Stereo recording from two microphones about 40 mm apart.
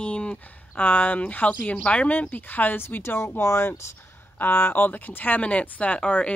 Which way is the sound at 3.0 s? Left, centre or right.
Left.